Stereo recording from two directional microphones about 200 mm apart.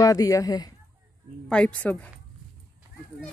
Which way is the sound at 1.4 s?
5° left (ahead or behind).